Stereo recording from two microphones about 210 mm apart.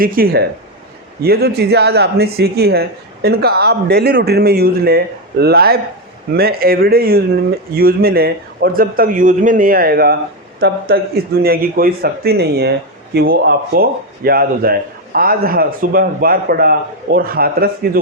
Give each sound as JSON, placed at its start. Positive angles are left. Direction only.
{"t": 0.0, "sound": "speech", "side_deg": -45}